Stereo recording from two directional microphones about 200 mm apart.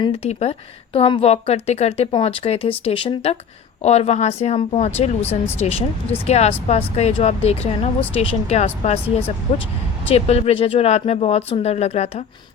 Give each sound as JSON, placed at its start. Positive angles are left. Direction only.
{"t": 0.0, "sound": "a woman's voice", "side_deg": 30}
{"t": 5.2, "sound": "speech", "side_deg": 10}
{"t": 6.1, "sound": "a woman's voice", "side_deg": 30}